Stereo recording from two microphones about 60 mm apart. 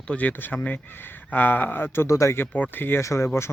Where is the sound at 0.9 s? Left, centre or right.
Left.